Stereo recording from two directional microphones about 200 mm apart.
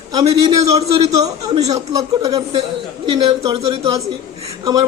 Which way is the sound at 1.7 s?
30° right (ahead or behind).